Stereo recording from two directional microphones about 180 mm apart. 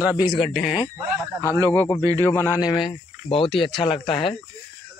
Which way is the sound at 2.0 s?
20° right (ahead or behind).